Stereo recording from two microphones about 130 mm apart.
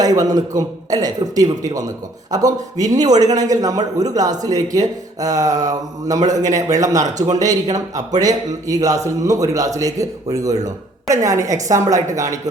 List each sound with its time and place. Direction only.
0.0 s a man's voice: 30° right (ahead or behind)
6.2 s a man's voice: 65° right (ahead or behind)
6.5 s a man's voice: 25° right (ahead or behind)